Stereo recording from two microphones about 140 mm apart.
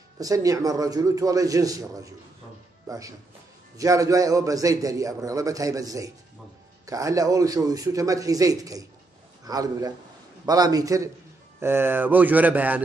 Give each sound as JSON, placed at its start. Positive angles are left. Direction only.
{"t": 0.2, "sound": "a man's voice", "side_deg": -25}
{"t": 3.7, "sound": "a man's voice", "side_deg": -25}